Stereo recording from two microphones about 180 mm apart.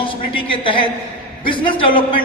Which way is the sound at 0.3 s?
30° left (ahead or behind).